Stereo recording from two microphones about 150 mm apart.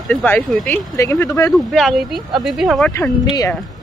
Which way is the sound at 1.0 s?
20° left (ahead or behind).